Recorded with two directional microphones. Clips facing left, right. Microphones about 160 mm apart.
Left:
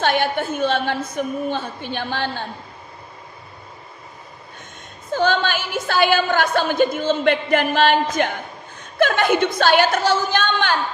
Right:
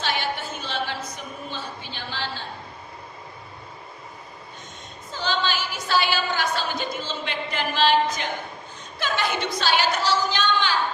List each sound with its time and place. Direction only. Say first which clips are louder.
0.0 s a woman's voice: left 8 dB; 55° left (ahead or behind)
5.1 s a woman's voice: left 7 dB; 55° left (ahead or behind)